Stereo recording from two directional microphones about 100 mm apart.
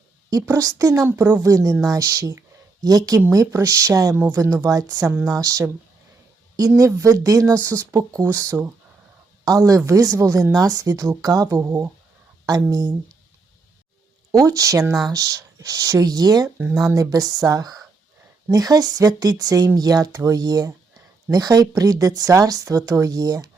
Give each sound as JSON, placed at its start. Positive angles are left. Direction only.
{"t": 0.4, "sound": "speech", "side_deg": -35}
{"t": 1.0, "sound": "a woman's voice", "side_deg": -20}
{"t": 1.4, "sound": "speech", "side_deg": -35}
{"t": 4.1, "sound": "a woman's voice", "side_deg": -20}
{"t": 4.6, "sound": "speech", "side_deg": -40}
{"t": 6.7, "sound": "a woman's voice", "side_deg": -35}
{"t": 12.5, "sound": "speech", "side_deg": -35}
{"t": 14.3, "sound": "speech", "side_deg": -35}